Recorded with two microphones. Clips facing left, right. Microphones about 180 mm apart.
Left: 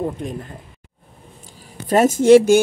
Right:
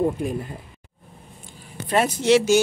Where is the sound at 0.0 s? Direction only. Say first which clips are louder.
Right 2 dB; 10° right (ahead or behind).